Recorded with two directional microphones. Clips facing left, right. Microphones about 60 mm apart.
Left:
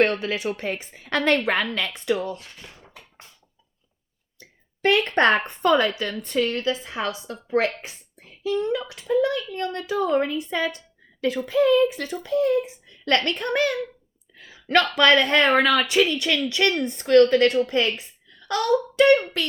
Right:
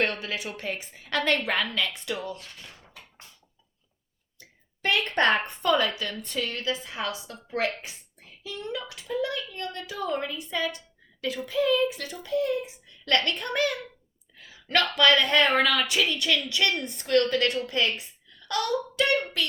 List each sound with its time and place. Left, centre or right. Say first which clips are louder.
0.0 s speech: left 7 dB; left
4.8 s speech: left 5 dB; left
9.1 s speech: left 8 dB; left
9.6 s speech: left 8 dB; left
14.7 s speech: left 4 dB; left